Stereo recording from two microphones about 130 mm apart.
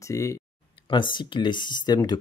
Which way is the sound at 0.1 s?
25° left (ahead or behind).